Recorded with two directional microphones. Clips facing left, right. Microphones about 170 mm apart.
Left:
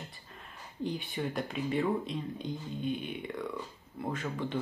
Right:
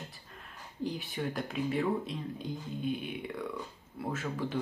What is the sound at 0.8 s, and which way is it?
Speech, centre (ahead or behind).